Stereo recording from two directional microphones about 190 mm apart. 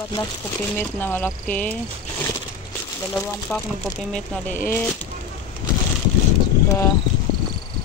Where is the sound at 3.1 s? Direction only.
5° left (ahead or behind).